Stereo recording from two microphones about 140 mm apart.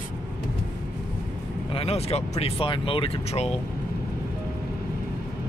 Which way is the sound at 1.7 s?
45° left (ahead or behind).